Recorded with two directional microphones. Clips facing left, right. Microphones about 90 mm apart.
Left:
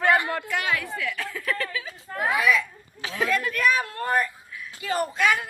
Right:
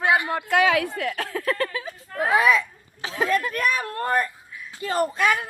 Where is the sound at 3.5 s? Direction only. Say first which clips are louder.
Left 1 dB; 45° right (ahead or behind).